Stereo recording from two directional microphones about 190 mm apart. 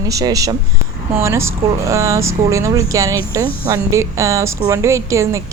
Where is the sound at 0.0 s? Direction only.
20° right (ahead or behind).